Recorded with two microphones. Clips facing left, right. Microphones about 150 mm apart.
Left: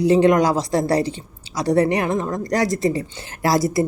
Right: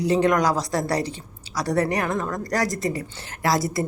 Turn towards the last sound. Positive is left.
turn(degrees=25)  # may be behind; listen again after turning